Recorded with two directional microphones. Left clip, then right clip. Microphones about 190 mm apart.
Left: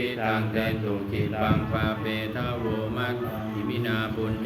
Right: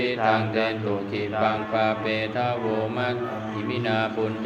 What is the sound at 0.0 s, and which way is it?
Mantra, 20° left (ahead or behind).